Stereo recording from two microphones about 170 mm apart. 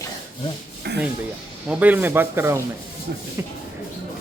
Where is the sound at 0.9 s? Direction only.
85° right.